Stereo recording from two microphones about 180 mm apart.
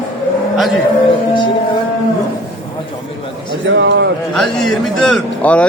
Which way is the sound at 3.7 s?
80° right.